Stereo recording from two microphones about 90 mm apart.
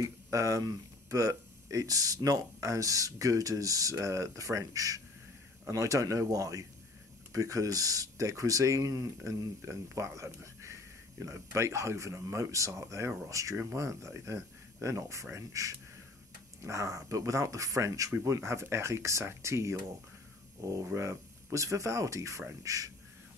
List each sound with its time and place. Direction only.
0.0 s speech: 35° right (ahead or behind)